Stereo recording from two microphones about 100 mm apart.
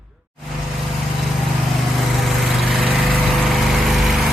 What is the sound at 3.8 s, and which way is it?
Vehicle, centre (ahead or behind).